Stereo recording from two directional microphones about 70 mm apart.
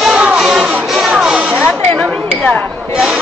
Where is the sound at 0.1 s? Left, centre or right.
Centre.